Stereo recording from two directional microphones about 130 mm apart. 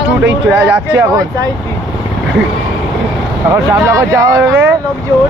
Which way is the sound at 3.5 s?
20° right (ahead or behind).